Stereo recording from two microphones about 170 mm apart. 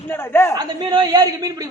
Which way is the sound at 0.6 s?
25° right (ahead or behind).